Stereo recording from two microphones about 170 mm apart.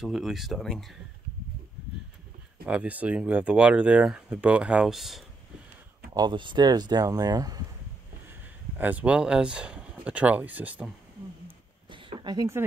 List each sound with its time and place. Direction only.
0.0 s speech: centre (ahead or behind)
2.6 s speech: 5° right (ahead or behind)
6.1 s speech: 25° right (ahead or behind)
8.3 s speech: 10° right (ahead or behind)
11.9 s a sound: 30° right (ahead or behind)